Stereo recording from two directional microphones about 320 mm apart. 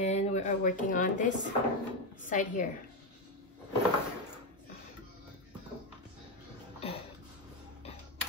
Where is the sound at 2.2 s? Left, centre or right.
Left.